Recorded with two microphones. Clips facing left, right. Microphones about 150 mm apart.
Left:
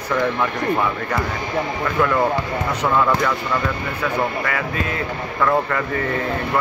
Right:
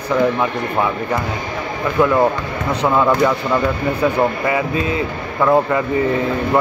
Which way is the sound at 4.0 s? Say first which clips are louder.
Right 5 dB; 20° right (ahead or behind).